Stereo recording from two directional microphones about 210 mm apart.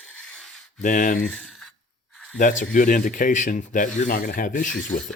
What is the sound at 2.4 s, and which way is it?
Speech, 40° left (ahead or behind).